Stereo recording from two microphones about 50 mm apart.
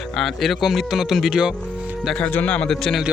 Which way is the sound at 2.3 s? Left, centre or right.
Left.